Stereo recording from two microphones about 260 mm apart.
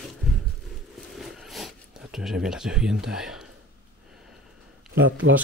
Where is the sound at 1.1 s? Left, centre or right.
Centre.